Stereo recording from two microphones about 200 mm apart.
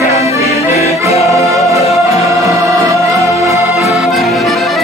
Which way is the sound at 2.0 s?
15° right (ahead or behind).